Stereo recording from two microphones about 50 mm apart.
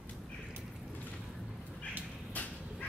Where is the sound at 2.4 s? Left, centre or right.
Left.